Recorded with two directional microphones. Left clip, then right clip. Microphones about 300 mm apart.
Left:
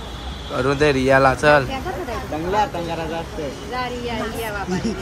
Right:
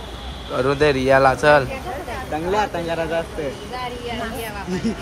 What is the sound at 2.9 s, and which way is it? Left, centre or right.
Speech, right.